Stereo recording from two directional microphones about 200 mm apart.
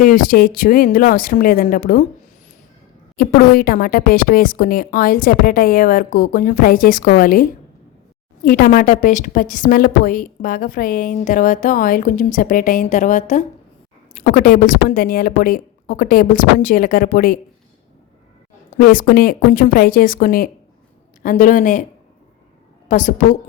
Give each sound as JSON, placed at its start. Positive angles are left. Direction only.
{"t": 0.0, "sound": "a woman's voice", "side_deg": 45}
{"t": 3.2, "sound": "a woman's voice", "side_deg": 45}
{"t": 18.8, "sound": "a woman's voice", "side_deg": 45}
{"t": 22.9, "sound": "speech", "side_deg": 40}